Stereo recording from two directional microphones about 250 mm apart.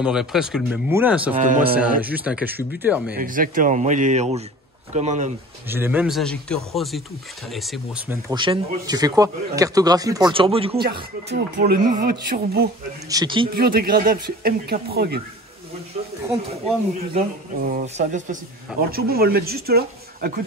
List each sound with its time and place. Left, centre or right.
0.0 s speech: centre
1.3 s speech: right
1.8 s speech: centre
3.2 s a man's voice: right
5.7 s speech: centre
11.3 s speech: right
13.1 s speech: centre
13.5 s speech: right
17.7 s speech: right